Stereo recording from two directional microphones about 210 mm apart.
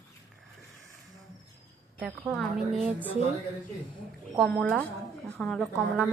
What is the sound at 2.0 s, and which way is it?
Speech, centre (ahead or behind).